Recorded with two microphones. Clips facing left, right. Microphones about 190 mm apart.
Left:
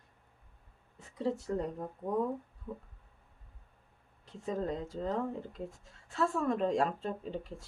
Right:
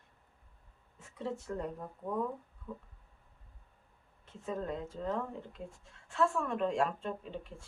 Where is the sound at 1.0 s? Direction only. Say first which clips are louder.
Left 6 dB; 35° left (ahead or behind).